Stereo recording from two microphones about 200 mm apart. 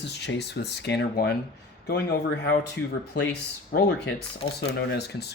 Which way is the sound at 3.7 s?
45° left (ahead or behind).